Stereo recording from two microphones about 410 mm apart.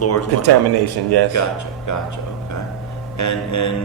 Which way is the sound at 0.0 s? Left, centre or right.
Left.